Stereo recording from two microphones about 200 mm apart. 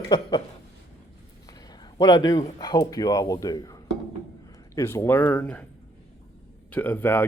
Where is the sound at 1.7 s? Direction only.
20° left (ahead or behind).